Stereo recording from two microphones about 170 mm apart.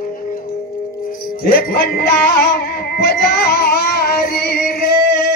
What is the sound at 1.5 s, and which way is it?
Music, 60° left (ahead or behind).